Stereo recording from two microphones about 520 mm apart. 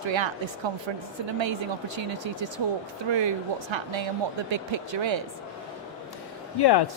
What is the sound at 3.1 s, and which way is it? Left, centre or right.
Speech, right.